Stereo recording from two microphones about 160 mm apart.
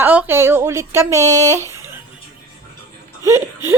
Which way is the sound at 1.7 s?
15° right (ahead or behind).